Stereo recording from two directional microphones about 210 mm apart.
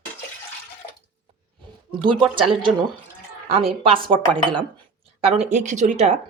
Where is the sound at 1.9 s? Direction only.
20° right (ahead or behind).